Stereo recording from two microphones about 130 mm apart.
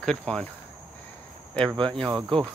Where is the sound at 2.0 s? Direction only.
30° right (ahead or behind).